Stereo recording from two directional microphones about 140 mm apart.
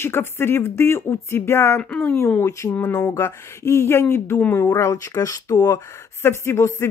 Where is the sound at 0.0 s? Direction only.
15° left (ahead or behind).